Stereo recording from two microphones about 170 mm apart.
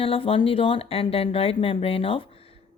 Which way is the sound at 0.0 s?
35° left (ahead or behind).